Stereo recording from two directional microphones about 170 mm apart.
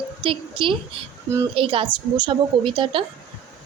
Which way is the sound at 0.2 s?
30° right (ahead or behind).